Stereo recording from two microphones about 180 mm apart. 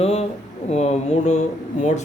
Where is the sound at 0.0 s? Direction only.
35° left (ahead or behind).